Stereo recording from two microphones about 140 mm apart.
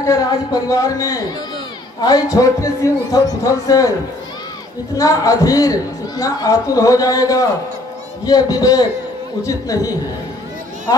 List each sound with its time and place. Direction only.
0.0 s a man's voice: 25° left (ahead or behind)
4.9 s a man's voice: 25° left (ahead or behind)